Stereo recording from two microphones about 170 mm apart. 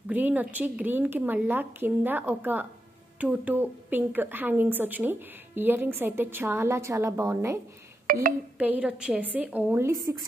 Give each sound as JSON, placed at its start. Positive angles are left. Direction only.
{"t": 0.1, "sound": "a woman's voice", "side_deg": -10}
{"t": 8.1, "sound": "speech", "side_deg": -60}
{"t": 8.5, "sound": "a woman's voice", "side_deg": -10}